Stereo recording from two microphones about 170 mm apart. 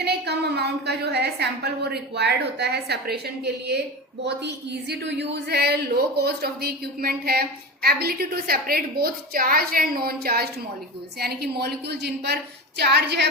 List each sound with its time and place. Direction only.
0.0 s a woman's voice: 75° right (ahead or behind)
4.3 s a woman's voice: 85° right